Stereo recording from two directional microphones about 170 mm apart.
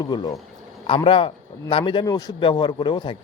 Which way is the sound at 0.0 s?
25° left (ahead or behind).